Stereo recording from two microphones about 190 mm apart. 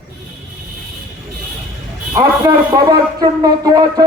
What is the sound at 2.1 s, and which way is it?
A man's voice, 20° right (ahead or behind).